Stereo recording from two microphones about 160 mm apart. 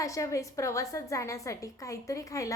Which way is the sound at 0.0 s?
20° left (ahead or behind).